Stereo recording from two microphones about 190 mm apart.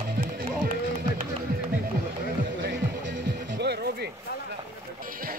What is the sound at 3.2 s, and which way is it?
Music, 60° right (ahead or behind).